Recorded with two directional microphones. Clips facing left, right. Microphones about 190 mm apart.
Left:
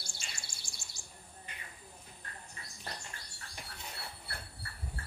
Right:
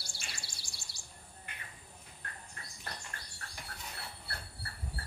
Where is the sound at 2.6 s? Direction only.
55° right (ahead or behind).